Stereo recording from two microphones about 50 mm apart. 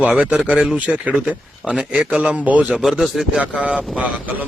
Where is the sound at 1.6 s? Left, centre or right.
Centre.